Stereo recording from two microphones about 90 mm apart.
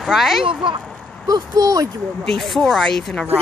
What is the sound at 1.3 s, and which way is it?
Speech, 40° right (ahead or behind).